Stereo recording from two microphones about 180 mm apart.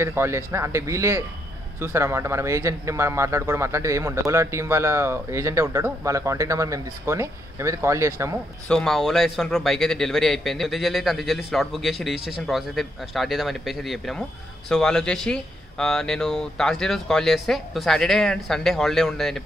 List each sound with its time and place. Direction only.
0.0 s speech: 15° right (ahead or behind)
8.6 s a man's voice: 5° left (ahead or behind)